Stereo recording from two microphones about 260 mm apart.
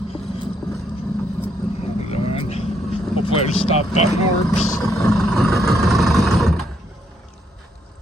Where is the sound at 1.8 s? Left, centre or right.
Left.